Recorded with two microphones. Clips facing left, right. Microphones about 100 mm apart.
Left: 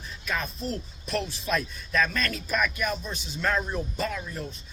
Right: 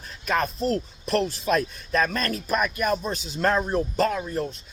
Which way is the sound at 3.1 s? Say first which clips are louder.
Right 6 dB; 90° right.